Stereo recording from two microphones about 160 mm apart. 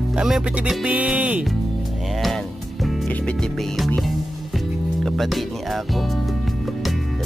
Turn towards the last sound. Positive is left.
turn(degrees=0)  # may be behind; listen again after turning